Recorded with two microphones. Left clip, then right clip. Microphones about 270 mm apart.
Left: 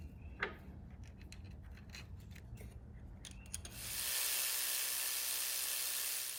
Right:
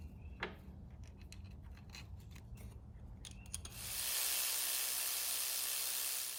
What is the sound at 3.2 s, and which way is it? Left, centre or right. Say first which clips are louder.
Steam: even; centre.